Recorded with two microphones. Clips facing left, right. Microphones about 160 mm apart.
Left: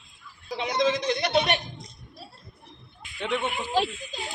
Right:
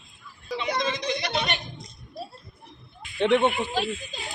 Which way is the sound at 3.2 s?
60° right (ahead or behind).